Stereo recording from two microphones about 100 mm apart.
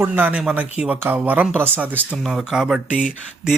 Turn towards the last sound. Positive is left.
turn(degrees=-10)  # may be behind; listen again after turning